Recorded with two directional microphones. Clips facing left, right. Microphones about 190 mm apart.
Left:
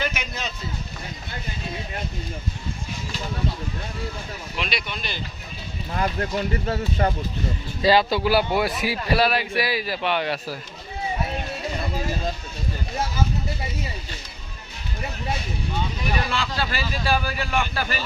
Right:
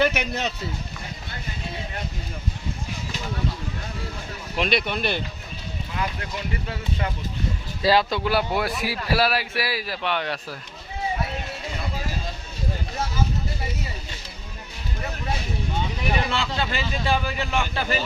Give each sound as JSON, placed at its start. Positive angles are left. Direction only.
{"t": 0.0, "sound": "speech", "side_deg": -65}
{"t": 4.5, "sound": "speech", "side_deg": -50}
{"t": 5.9, "sound": "speech", "side_deg": 45}
{"t": 7.8, "sound": "a man's voice", "side_deg": 0}
{"t": 16.1, "sound": "speech", "side_deg": -25}